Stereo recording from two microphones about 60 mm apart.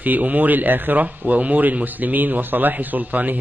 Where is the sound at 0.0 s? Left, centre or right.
Right.